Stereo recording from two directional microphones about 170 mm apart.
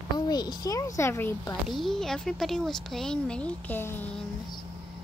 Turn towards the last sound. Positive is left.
turn(degrees=10)  # may be behind; listen again after turning